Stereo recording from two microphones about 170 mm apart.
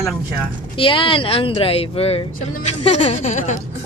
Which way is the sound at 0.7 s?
30° left (ahead or behind).